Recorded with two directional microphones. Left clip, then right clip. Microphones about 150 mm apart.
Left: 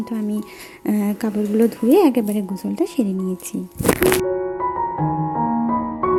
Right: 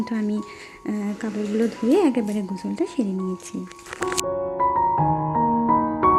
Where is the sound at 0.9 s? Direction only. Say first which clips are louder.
Left 6 dB; 30° left (ahead or behind).